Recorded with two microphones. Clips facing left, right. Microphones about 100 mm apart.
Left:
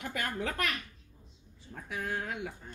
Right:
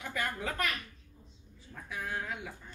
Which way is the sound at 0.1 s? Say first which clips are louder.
Even; 60° left (ahead or behind).